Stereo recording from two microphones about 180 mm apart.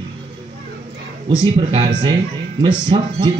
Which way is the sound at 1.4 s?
30° right (ahead or behind).